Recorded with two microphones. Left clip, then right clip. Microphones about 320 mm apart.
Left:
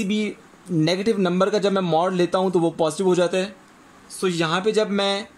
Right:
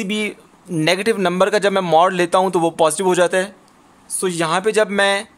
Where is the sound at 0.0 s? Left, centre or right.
Right.